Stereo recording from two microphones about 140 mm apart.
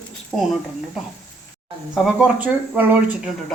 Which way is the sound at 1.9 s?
10° right (ahead or behind).